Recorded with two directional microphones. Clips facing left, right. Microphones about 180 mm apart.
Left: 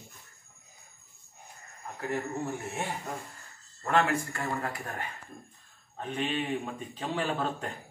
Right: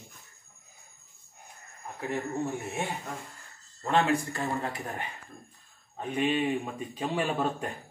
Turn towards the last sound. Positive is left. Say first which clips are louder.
# right 2 dB
turn(degrees=-10)  # may be behind; listen again after turning